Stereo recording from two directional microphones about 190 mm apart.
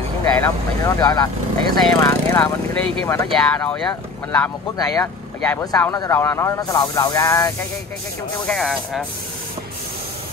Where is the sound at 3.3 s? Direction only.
Centre (ahead or behind).